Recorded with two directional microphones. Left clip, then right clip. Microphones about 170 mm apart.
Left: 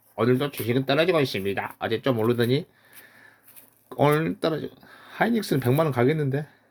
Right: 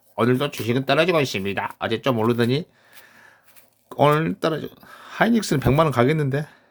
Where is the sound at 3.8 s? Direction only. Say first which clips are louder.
Right 4 dB; 20° right (ahead or behind).